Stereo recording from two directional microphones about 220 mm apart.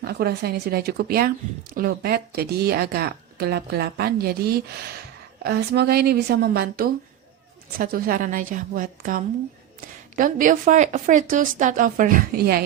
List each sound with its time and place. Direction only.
0.0 s a woman's voice: 45° right (ahead or behind)